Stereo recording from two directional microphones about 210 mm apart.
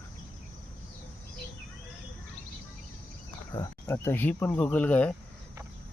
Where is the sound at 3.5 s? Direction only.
15° left (ahead or behind).